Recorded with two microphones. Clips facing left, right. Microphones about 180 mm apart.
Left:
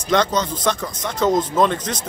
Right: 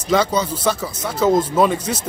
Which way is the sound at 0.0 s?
5° right (ahead or behind).